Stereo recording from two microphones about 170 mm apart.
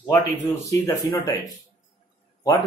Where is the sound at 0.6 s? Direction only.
15° left (ahead or behind).